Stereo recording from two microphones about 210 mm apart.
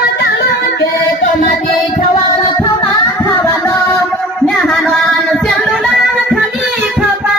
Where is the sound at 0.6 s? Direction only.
45° left (ahead or behind).